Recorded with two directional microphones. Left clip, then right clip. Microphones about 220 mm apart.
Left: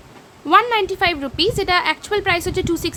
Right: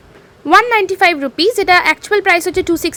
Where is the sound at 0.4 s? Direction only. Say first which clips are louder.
Right 5 dB; 20° right (ahead or behind).